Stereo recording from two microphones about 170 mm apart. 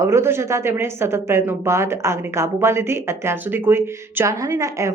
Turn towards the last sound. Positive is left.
turn(degrees=-15)  # may be behind; listen again after turning